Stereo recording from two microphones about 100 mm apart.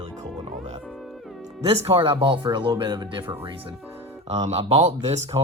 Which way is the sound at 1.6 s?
65° right (ahead or behind).